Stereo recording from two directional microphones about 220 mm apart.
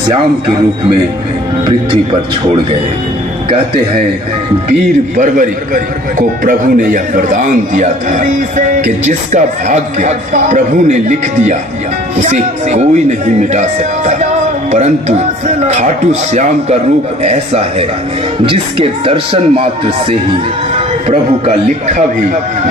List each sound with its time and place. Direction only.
5.1 s a man's voice: 35° right (ahead or behind)
17.2 s a man's voice: 30° right (ahead or behind)